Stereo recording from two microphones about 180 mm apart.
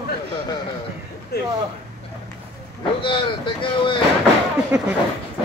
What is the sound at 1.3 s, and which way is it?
Speech, 60° left (ahead or behind).